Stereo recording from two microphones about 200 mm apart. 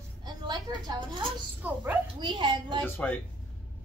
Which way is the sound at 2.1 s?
25° right (ahead or behind).